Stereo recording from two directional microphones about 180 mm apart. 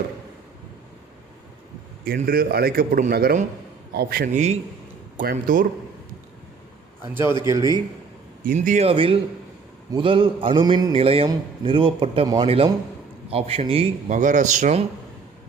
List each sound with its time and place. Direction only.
2.0 s a man's voice: 55° right (ahead or behind)
7.1 s a man's voice: 10° right (ahead or behind)
8.4 s a man's voice: 45° right (ahead or behind)
14.1 s speech: 45° right (ahead or behind)